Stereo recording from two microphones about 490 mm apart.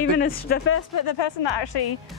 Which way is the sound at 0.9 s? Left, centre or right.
Left.